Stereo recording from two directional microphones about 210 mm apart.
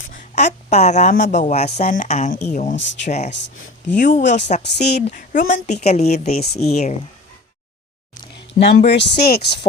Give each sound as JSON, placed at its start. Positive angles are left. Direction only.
{"t": 0.1, "sound": "speech", "side_deg": 35}
{"t": 2.7, "sound": "speech", "side_deg": 60}
{"t": 3.1, "sound": "speech", "side_deg": 30}
{"t": 3.3, "sound": "speech", "side_deg": 60}
{"t": 3.9, "sound": "speech", "side_deg": 35}
{"t": 4.6, "sound": "speech", "side_deg": 50}
{"t": 5.0, "sound": "speech", "side_deg": 40}
{"t": 8.4, "sound": "speech", "side_deg": 55}